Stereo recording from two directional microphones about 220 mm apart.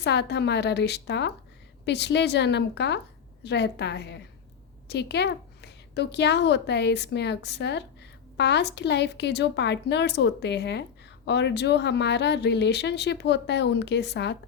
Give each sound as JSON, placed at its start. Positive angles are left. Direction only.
{"t": 0.0, "sound": "speech", "side_deg": 50}